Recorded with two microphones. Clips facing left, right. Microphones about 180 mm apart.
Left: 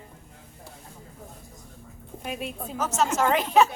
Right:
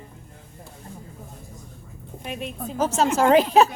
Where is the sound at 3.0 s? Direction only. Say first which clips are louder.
Right 6 dB; 35° right (ahead or behind).